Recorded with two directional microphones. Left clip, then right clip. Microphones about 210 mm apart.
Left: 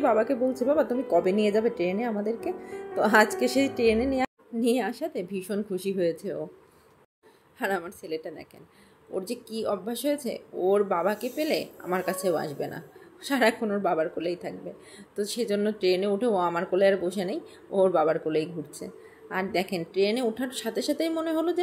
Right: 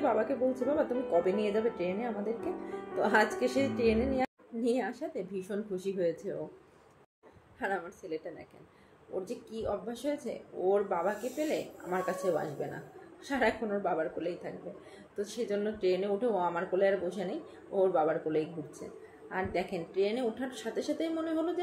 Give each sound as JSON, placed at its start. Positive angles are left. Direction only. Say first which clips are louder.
{"t": 0.0, "sound": "speech", "louder": "left 6 dB", "side_deg": 50}
{"t": 7.5, "sound": "speech", "louder": "left 6 dB", "side_deg": 55}